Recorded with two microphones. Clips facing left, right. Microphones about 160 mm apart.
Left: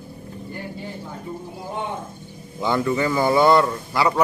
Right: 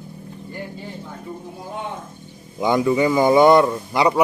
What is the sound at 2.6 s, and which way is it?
Speech, 15° right (ahead or behind).